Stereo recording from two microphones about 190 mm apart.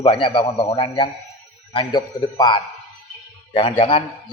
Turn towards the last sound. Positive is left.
turn(degrees=30)  # may be behind; listen again after turning